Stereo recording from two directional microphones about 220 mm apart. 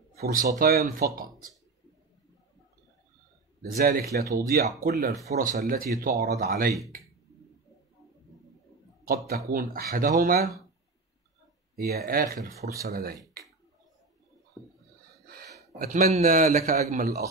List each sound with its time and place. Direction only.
0.1 s a man's voice: 40° right (ahead or behind)
3.6 s a man's voice: 40° right (ahead or behind)
9.0 s a man's voice: 40° right (ahead or behind)
11.7 s speech: 45° right (ahead or behind)
14.6 s a sound: 15° left (ahead or behind)
15.2 s gasp: 45° right (ahead or behind)
15.8 s a man's voice: 35° right (ahead or behind)